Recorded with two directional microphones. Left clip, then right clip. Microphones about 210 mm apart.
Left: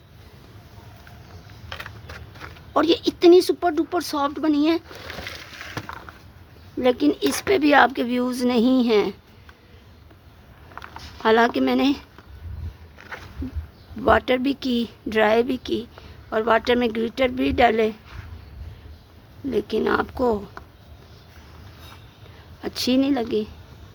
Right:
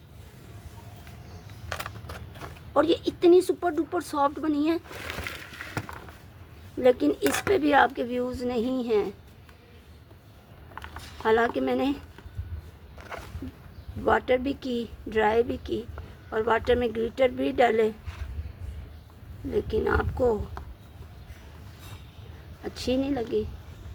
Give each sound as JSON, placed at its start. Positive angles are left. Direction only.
{"t": 2.0, "sound": "a sound", "side_deg": 5}
{"t": 2.7, "sound": "speech", "side_deg": 30}
{"t": 5.0, "sound": "a sound", "side_deg": -20}
{"t": 6.7, "sound": "a woman's voice", "side_deg": 25}
{"t": 11.2, "sound": "a woman's voice", "side_deg": 35}
{"t": 14.0, "sound": "a woman's voice", "side_deg": 35}
{"t": 19.5, "sound": "a woman's voice", "side_deg": 35}
{"t": 22.6, "sound": "a woman's voice", "side_deg": 35}